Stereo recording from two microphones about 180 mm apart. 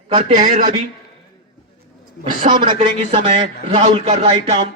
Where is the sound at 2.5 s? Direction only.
25° right (ahead or behind).